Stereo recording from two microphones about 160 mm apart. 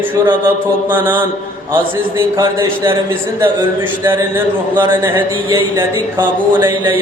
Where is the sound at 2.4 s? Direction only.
30° right (ahead or behind).